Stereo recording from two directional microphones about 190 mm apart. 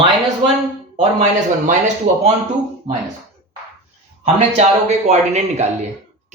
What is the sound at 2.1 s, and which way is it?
Speech, 40° right (ahead or behind).